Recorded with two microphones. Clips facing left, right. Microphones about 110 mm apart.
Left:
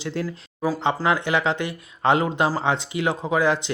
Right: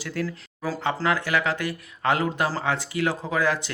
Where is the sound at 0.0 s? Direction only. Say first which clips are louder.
Left 2 dB; 25° left (ahead or behind).